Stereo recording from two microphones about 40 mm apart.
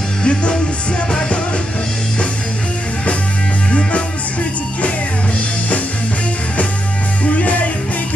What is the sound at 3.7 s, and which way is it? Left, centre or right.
Music, left.